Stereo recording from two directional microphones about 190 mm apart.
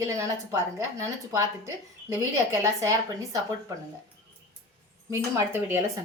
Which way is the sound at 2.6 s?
15° right (ahead or behind).